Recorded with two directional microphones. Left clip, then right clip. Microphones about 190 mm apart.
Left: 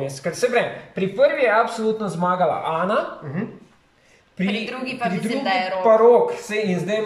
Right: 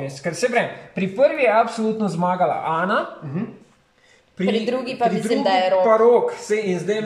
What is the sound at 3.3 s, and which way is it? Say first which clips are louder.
Speech: right 1 dB; 10° right (ahead or behind).